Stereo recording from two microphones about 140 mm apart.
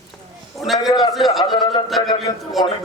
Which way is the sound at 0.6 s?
Centre (ahead or behind).